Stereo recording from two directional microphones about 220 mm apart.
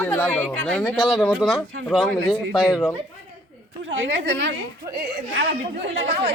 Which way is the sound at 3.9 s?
60° right (ahead or behind).